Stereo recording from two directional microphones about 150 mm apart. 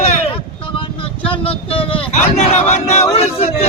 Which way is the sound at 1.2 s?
35° left (ahead or behind).